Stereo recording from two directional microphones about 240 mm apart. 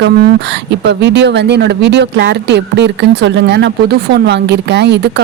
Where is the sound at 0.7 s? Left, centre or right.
Right.